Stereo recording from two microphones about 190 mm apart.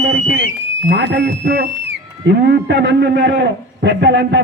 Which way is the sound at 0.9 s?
65° right (ahead or behind).